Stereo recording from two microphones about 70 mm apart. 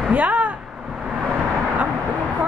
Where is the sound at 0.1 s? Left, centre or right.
Right.